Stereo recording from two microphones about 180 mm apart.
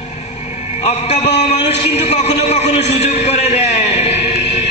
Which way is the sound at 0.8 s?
35° left (ahead or behind).